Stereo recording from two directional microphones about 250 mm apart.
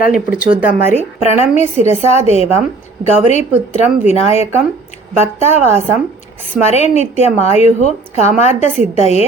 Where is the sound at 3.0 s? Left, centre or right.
Left.